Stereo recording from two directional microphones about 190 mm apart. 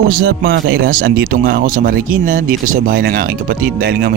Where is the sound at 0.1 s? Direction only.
50° right (ahead or behind).